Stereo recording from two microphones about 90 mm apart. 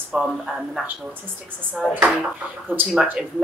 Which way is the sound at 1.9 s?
20° right (ahead or behind).